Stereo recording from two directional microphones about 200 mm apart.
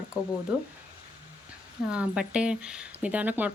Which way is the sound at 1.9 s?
5° right (ahead or behind).